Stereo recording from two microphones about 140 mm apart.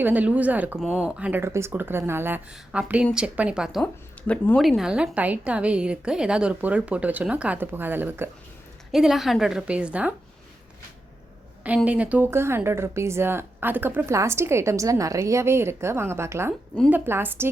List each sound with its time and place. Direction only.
0.0 s speech: 10° right (ahead or behind)
4.3 s speech: 5° left (ahead or behind); by 8.3 s 15° right (ahead or behind)
8.9 s a woman's voice: centre (ahead or behind)
11.9 s speech: 10° right (ahead or behind)